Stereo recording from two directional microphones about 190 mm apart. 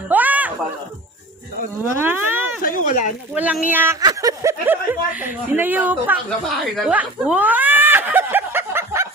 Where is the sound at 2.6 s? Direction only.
45° left (ahead or behind).